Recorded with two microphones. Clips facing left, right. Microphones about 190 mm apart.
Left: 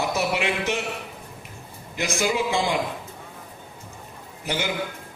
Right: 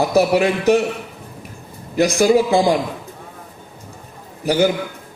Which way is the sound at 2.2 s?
35° right (ahead or behind).